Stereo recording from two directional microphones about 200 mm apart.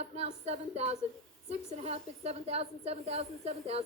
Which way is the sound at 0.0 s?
30° right (ahead or behind).